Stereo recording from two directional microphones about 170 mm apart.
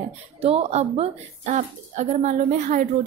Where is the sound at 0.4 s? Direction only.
35° right (ahead or behind).